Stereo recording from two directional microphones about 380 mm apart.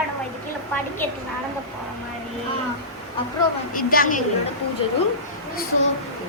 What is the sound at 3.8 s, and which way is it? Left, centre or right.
Speech, left.